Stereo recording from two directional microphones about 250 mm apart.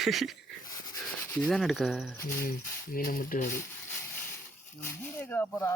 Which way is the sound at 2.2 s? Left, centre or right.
Left.